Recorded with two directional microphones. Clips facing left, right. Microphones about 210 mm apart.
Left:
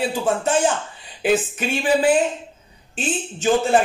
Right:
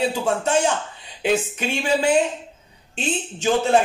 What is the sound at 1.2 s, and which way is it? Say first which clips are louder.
A man's voice: left 2 dB; 5° left (ahead or behind).